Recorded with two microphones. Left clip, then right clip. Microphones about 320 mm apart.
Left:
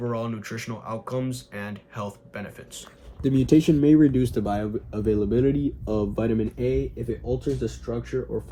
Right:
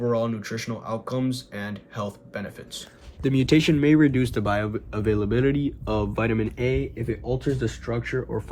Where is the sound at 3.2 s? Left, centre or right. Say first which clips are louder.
Left 1 dB; right.